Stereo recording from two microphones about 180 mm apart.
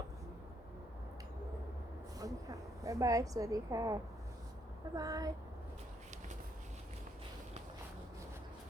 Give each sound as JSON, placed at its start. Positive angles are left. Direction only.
{"t": 2.1, "sound": "a woman's voice", "side_deg": -20}
{"t": 4.9, "sound": "a woman's voice", "side_deg": -20}